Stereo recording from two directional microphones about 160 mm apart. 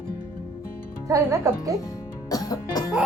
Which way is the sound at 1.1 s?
20° right (ahead or behind).